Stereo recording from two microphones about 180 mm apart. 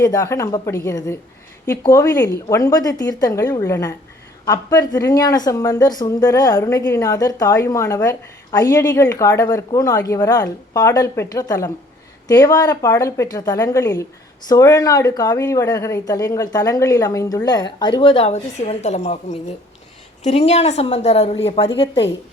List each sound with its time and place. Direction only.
0.0 s a woman's voice: 20° left (ahead or behind)